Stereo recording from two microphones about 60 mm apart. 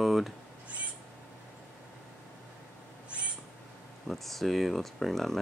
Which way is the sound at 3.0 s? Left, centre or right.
Centre.